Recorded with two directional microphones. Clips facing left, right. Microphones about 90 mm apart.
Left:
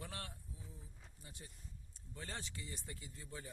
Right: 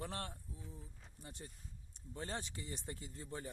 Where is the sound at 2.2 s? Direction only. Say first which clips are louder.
Right 4 dB; 30° right (ahead or behind).